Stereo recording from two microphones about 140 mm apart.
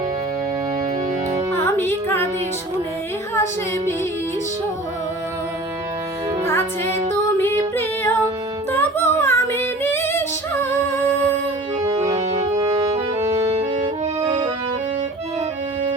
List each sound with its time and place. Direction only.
1.5 s music: 15° left (ahead or behind)
3.3 s a capella: 20° left (ahead or behind)
6.4 s music: 15° left (ahead or behind)
8.7 s female singing: 15° left (ahead or behind)
12.0 s organ: 25° right (ahead or behind)
13.6 s music: 40° right (ahead or behind)